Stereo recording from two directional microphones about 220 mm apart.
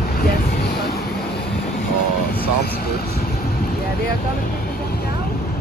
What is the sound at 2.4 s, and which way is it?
Speech, 45° left (ahead or behind).